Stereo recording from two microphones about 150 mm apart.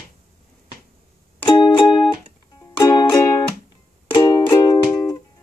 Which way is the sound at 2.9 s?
20° left (ahead or behind).